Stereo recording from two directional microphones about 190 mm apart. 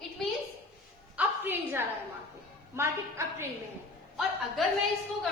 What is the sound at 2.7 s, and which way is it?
Speech, 15° right (ahead or behind).